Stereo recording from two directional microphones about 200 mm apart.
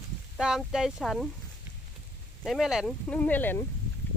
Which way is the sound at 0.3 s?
5° right (ahead or behind).